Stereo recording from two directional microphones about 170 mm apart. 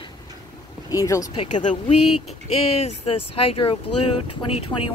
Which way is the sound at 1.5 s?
45° left (ahead or behind).